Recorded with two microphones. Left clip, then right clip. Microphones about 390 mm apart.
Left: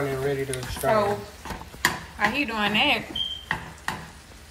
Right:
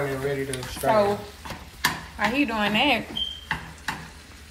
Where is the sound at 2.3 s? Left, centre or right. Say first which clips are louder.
Right 1 dB; centre.